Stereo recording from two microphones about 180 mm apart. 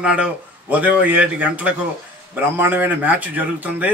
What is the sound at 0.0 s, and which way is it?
A man's voice, 5° right (ahead or behind).